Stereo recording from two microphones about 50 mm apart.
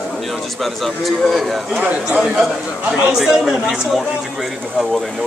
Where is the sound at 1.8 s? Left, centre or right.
Right.